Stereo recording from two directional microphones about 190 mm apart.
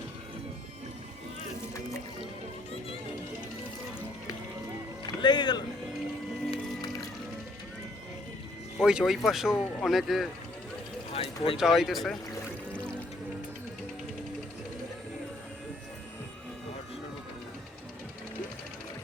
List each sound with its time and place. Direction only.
5.0 s speech: 20° left (ahead or behind)
8.8 s speech: centre (ahead or behind)
11.1 s speech: 30° left (ahead or behind)
11.5 s speech: centre (ahead or behind)
12.7 s music: 5° left (ahead or behind)